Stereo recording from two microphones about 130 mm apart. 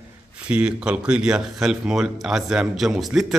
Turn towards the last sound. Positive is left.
turn(degrees=0)  # may be behind; listen again after turning